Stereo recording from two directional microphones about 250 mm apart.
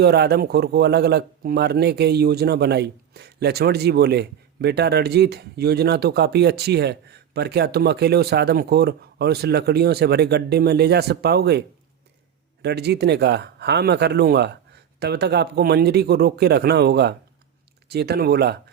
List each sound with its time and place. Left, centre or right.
0.0 s a man's voice: right
12.6 s a man's voice: right